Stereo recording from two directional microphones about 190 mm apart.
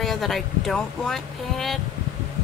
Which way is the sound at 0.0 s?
Centre (ahead or behind).